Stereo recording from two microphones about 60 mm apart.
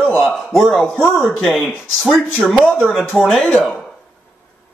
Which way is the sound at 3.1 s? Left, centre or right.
Centre.